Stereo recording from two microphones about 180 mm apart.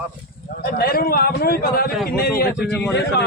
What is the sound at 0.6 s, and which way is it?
A man's voice, 60° left (ahead or behind).